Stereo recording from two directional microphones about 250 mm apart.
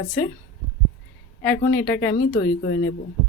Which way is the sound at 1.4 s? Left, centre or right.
Centre.